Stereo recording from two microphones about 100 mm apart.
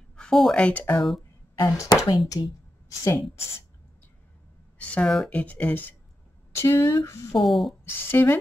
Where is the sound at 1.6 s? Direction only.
35° left (ahead or behind).